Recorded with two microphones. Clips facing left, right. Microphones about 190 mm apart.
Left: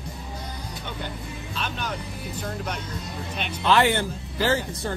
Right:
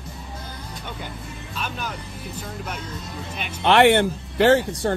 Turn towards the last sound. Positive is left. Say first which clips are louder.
# right 7 dB
turn(degrees=-70)  # may be behind; listen again after turning